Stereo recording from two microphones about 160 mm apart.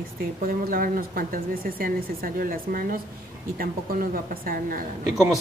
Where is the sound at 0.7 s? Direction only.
60° right (ahead or behind).